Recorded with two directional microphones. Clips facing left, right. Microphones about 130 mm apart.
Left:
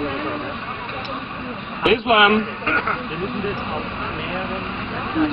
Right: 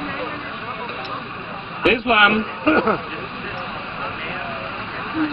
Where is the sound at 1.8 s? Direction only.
15° left (ahead or behind).